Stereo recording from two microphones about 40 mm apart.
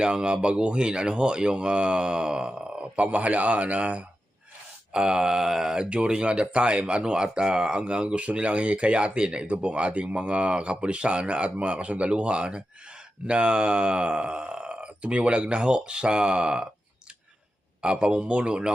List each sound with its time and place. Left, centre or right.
0.0 s speech: right
4.9 s speech: centre
17.8 s speech: right